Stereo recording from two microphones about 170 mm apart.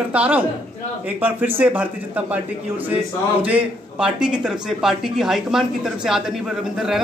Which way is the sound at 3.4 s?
5° right (ahead or behind).